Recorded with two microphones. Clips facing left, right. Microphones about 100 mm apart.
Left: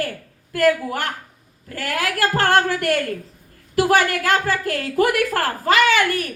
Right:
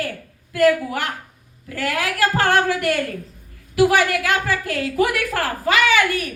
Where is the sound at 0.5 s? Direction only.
45° left (ahead or behind).